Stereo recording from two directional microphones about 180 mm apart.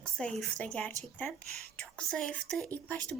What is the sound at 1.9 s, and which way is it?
A woman's voice, 5° left (ahead or behind).